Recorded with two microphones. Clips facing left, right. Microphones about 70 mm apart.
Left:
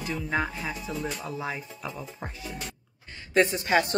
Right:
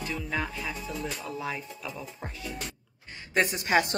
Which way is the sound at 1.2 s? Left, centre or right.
Left.